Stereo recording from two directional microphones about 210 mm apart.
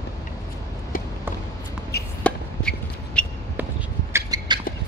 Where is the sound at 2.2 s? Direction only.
5° left (ahead or behind).